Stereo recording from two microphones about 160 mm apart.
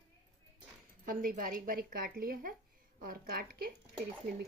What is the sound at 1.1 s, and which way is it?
A woman's voice, 60° right (ahead or behind).